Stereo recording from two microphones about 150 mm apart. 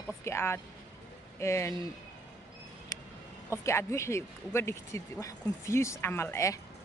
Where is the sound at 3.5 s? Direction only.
20° left (ahead or behind).